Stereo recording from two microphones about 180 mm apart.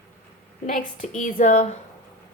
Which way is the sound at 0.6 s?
45° left (ahead or behind).